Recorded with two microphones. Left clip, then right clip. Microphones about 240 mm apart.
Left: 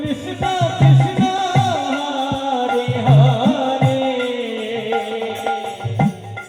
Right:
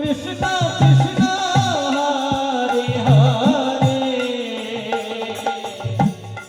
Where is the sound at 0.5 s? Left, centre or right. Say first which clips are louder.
Left 1 dB; right.